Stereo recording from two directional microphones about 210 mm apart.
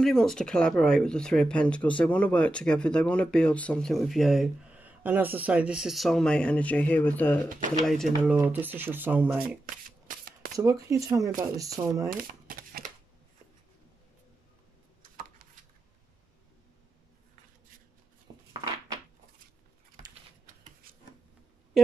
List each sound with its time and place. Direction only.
0.0 s speech: centre (ahead or behind)
10.0 s shuffling cards: 45° right (ahead or behind)
10.6 s speech: 15° right (ahead or behind)
12.1 s a sound: 40° right (ahead or behind)